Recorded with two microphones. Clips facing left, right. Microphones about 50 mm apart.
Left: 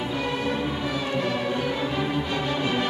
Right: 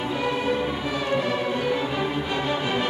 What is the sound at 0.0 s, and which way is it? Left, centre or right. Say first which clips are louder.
Music: right 2 dB; centre.